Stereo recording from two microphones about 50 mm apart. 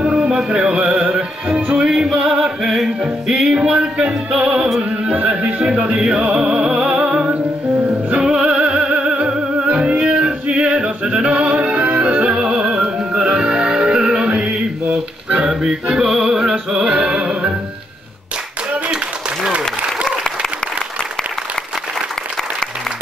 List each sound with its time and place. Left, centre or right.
0.0 s music: centre
5.0 s speech: right
5.9 s music: centre